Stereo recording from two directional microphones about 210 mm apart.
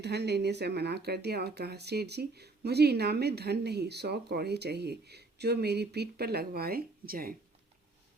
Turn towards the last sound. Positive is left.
turn(degrees=-45)  # may be behind; listen again after turning